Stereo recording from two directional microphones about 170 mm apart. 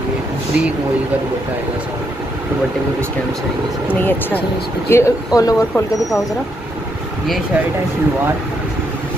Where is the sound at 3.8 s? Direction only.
10° left (ahead or behind).